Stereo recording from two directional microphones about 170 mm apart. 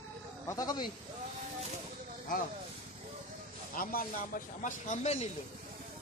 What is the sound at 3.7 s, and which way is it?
Speech, 55° left (ahead or behind).